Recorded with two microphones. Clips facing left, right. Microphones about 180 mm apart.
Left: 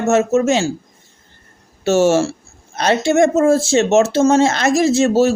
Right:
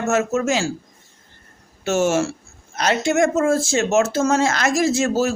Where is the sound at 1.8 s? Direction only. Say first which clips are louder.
Left 5 dB; 30° left (ahead or behind).